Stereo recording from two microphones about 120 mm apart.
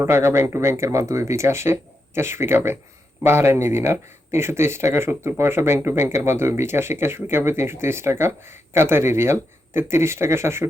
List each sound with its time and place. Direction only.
0.0 s speech: 20° right (ahead or behind)